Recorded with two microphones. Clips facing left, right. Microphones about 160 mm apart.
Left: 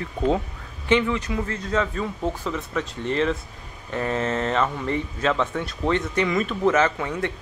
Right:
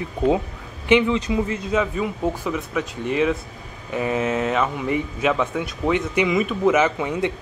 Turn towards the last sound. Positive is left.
turn(degrees=-15)  # may be behind; listen again after turning